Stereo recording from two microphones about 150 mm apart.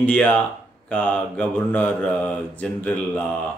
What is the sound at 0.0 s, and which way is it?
Speech, 10° left (ahead or behind).